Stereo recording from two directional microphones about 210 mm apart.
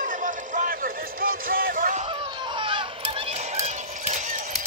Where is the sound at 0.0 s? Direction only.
40° right (ahead or behind).